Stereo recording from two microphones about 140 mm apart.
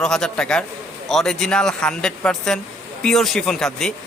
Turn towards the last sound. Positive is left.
turn(degrees=5)  # may be behind; listen again after turning